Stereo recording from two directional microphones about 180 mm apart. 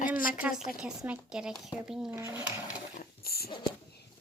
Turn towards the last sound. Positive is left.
turn(degrees=60)  # may be behind; listen again after turning